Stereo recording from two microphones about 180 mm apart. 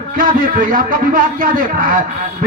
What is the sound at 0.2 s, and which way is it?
A man's voice, 50° right (ahead or behind).